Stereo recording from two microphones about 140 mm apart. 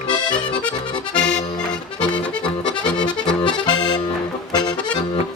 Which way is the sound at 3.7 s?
30° left (ahead or behind).